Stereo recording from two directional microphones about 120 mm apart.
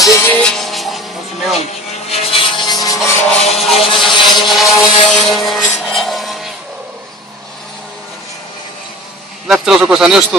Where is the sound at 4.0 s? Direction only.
Centre (ahead or behind).